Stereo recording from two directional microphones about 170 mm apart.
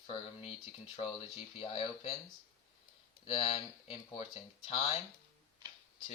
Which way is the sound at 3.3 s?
35° left (ahead or behind).